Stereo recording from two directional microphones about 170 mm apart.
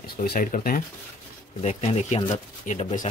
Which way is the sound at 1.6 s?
40° left (ahead or behind).